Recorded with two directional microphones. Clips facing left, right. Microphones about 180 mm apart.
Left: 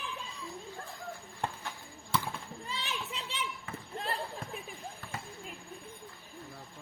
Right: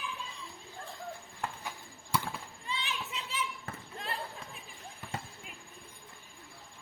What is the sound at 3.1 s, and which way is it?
Children playing, 30° left (ahead or behind).